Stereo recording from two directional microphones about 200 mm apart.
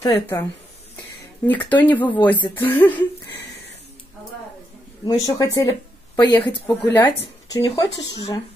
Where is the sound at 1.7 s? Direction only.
10° left (ahead or behind).